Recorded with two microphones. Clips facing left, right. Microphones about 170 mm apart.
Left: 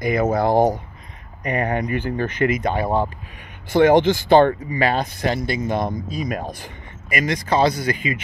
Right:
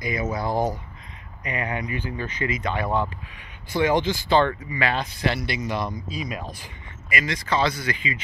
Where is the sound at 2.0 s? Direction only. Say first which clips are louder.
Left 8 dB; 60° left (ahead or behind).